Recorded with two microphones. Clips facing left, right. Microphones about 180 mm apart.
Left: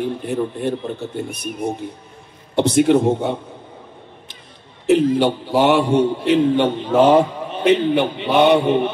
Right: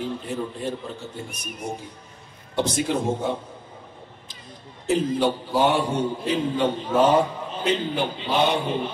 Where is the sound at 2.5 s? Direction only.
65° left (ahead or behind).